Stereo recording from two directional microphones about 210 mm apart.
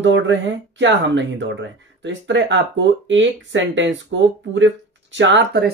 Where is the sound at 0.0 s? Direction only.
60° right (ahead or behind).